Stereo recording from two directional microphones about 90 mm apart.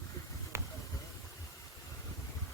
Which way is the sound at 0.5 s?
30° right (ahead or behind).